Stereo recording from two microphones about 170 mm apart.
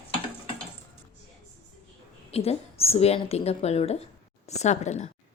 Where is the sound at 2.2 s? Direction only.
35° left (ahead or behind).